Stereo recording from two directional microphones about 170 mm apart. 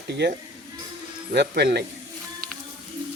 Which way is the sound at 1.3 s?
75° right (ahead or behind).